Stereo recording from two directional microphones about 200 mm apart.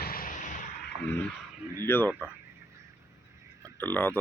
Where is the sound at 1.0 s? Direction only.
10° left (ahead or behind).